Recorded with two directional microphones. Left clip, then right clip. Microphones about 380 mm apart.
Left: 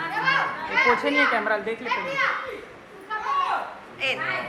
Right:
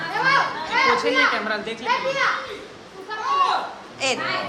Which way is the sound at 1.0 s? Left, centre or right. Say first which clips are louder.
Right 2 dB; centre.